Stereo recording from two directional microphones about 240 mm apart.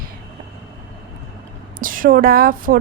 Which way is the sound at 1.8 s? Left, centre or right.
Right.